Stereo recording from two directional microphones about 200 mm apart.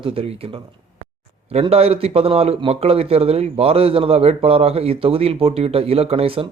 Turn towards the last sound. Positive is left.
turn(degrees=-30)  # may be behind; listen again after turning